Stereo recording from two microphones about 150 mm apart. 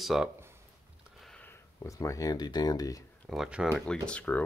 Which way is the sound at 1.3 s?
10° left (ahead or behind).